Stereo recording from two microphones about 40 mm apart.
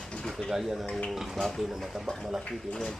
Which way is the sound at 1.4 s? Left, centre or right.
Centre.